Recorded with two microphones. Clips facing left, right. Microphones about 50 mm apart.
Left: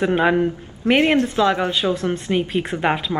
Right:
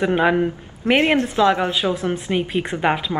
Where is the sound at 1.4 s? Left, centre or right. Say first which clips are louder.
Right 1 dB; centre.